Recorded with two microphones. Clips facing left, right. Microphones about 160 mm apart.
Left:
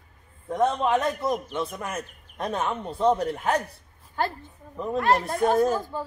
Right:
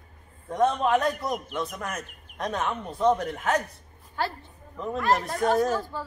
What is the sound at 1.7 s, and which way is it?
Speech, 10° left (ahead or behind).